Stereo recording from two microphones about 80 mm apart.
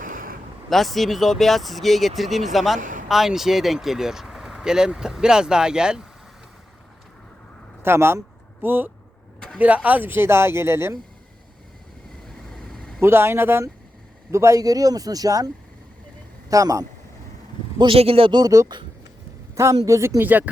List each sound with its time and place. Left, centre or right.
0.7 s speech: centre
7.8 s speech: right
12.7 s vehicle: centre
13.0 s speech: right
16.5 s speech: right
17.7 s a man's voice: right
18.4 s speech: right